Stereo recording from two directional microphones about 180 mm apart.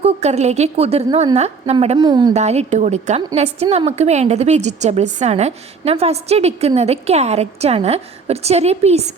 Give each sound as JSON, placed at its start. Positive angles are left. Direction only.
{"t": 0.0, "sound": "a woman's voice", "side_deg": -35}
{"t": 2.3, "sound": "a woman's voice", "side_deg": -40}